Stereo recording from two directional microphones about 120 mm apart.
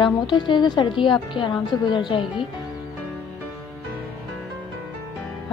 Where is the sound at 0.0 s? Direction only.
40° left (ahead or behind).